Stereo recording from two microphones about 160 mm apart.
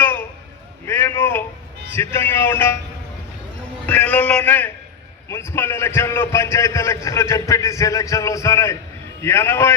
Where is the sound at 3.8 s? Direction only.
10° left (ahead or behind).